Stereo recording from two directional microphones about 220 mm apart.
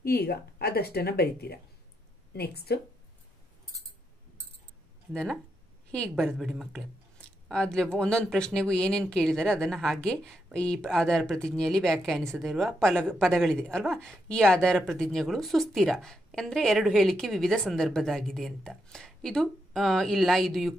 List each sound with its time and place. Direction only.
0.0 s a woman's voice: 45° left (ahead or behind)
5.1 s speech: centre (ahead or behind)